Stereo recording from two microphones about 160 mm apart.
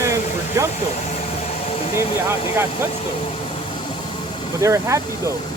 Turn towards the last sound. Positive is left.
turn(degrees=-20)  # may be behind; listen again after turning